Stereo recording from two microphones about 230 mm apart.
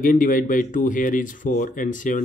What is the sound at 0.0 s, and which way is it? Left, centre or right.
Speech, left.